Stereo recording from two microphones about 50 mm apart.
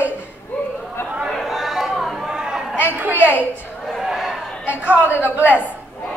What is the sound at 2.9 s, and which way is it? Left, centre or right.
Speech, right.